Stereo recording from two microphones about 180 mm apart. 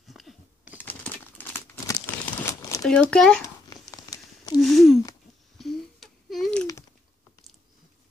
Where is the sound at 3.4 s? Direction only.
20° left (ahead or behind).